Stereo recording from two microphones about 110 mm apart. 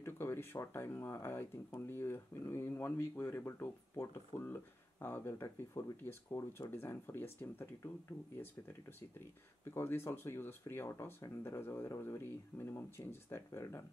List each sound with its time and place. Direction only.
0.0 s speech: 20° left (ahead or behind)
9.8 s speech: 20° left (ahead or behind)